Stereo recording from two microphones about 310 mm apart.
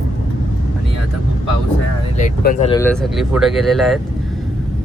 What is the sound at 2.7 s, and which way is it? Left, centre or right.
Speech, centre.